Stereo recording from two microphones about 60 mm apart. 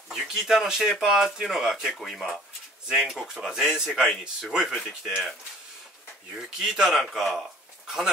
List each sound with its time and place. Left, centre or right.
0.1 s a man's voice: centre
3.3 s a man's voice: centre
6.3 s a man's voice: centre